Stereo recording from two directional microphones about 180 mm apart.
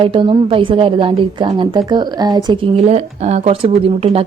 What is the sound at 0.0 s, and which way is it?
A woman's voice, 30° right (ahead or behind).